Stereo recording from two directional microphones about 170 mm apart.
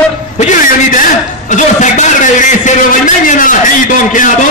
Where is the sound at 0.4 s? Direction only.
50° left (ahead or behind).